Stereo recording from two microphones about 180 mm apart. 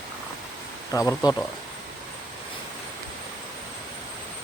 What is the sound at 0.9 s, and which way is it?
Speech, 20° left (ahead or behind).